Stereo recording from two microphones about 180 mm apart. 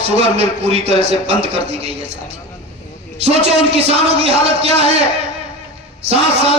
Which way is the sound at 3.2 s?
35° right (ahead or behind).